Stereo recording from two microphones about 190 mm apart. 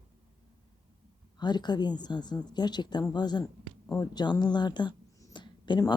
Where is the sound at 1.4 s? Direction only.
20° left (ahead or behind).